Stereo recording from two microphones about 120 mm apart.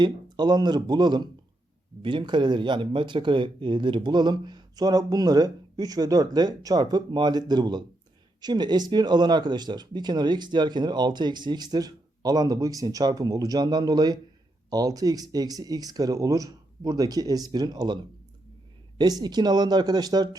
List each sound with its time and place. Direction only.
0.0 s speech: 35° right (ahead or behind)